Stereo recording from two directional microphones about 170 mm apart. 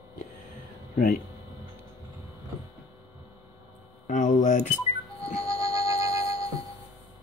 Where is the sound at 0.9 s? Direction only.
55° left (ahead or behind).